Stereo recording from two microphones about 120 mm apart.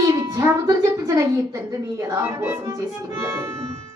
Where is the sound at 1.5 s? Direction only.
25° right (ahead or behind).